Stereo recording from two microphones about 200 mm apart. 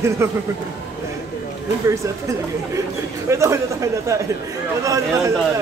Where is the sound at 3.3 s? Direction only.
15° right (ahead or behind).